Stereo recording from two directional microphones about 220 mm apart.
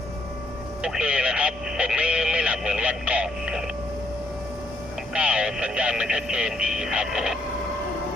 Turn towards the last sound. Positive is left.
turn(degrees=-5)  # may be behind; listen again after turning